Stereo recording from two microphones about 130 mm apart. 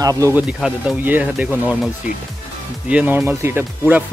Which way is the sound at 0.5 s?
5° right (ahead or behind).